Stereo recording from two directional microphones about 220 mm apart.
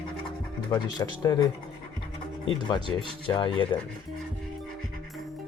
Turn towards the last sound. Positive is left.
turn(degrees=20)  # may be behind; listen again after turning